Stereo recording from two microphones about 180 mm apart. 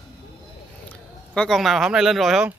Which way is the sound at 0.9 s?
5° left (ahead or behind).